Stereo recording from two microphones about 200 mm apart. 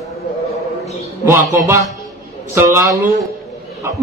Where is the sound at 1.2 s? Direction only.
15° right (ahead or behind).